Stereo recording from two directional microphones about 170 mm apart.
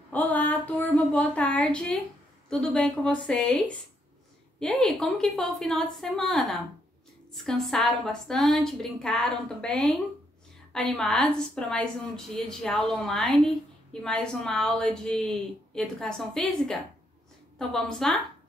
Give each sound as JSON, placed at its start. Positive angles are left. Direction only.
{"t": 0.1, "sound": "a woman's voice", "side_deg": 10}